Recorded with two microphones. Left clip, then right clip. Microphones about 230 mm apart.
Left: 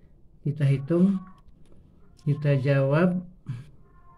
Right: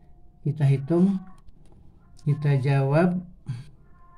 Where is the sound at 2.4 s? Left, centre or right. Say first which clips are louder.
Left 3 dB; centre.